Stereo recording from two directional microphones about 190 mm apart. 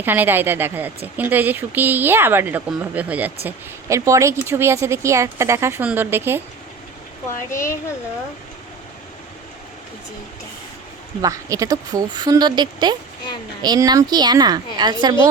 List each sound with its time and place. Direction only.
0.0 s speech: 10° right (ahead or behind)
7.5 s speech: 15° left (ahead or behind)
11.2 s speech: 15° right (ahead or behind)